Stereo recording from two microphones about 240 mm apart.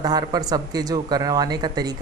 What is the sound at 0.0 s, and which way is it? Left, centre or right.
Speech, centre.